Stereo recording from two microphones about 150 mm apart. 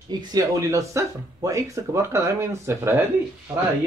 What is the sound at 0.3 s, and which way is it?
Speech, 20° right (ahead or behind).